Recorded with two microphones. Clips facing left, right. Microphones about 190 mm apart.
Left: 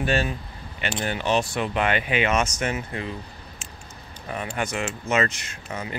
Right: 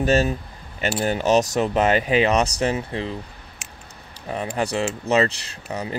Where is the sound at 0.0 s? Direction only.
40° right (ahead or behind).